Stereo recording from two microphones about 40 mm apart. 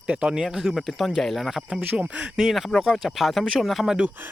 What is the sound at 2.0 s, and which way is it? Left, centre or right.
Speech, right.